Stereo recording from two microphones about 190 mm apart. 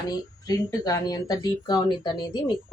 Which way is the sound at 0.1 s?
20° left (ahead or behind).